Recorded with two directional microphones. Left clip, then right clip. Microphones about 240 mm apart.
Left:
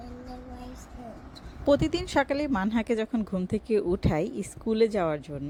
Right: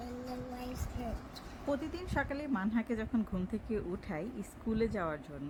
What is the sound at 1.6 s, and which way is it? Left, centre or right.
Speech, left.